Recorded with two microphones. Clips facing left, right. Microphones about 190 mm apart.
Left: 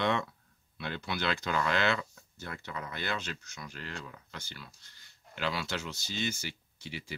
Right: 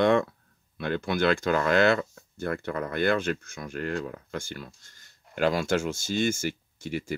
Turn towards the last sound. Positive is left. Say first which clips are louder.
# right 11 dB
turn(degrees=-45)  # may be behind; listen again after turning